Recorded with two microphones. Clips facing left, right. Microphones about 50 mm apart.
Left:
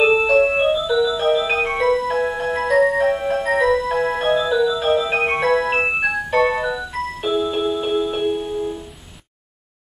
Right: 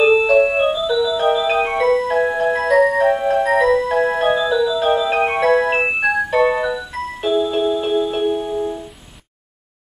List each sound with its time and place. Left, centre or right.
0.0 s music: centre
0.3 s music: centre